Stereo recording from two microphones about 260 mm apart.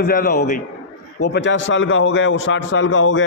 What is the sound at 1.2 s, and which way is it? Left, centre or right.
A man's voice, left.